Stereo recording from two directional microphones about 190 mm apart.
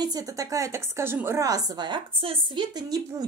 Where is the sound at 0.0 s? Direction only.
20° right (ahead or behind).